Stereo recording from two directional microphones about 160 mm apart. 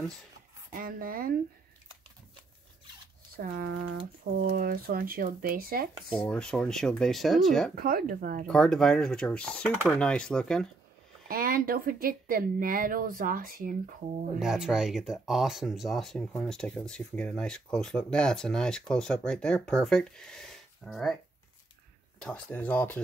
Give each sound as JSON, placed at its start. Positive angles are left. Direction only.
{"t": 0.7, "sound": "speech", "side_deg": -60}
{"t": 3.3, "sound": "speech", "side_deg": -65}
{"t": 6.1, "sound": "speech", "side_deg": 5}
{"t": 7.7, "sound": "speech", "side_deg": -65}
{"t": 8.5, "sound": "speech", "side_deg": 5}
{"t": 11.2, "sound": "speech", "side_deg": -65}
{"t": 14.4, "sound": "speech", "side_deg": -5}
{"t": 22.2, "sound": "speech", "side_deg": 10}